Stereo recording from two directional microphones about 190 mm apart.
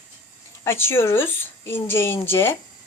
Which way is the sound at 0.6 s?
15° left (ahead or behind).